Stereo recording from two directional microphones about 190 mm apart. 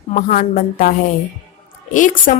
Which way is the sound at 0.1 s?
40° left (ahead or behind).